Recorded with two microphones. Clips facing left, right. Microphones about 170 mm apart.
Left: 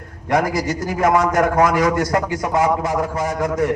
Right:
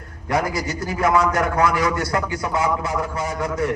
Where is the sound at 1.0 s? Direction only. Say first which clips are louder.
Left 3 dB; 45° left (ahead or behind).